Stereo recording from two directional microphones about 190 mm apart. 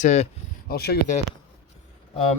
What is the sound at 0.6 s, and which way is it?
Speech, 55° left (ahead or behind).